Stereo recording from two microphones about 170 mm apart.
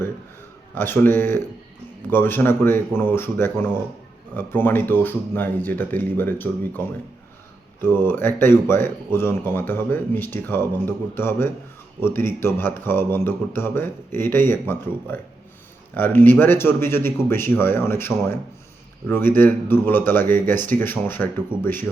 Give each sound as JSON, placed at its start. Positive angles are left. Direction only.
{"t": 0.8, "sound": "speech", "side_deg": 10}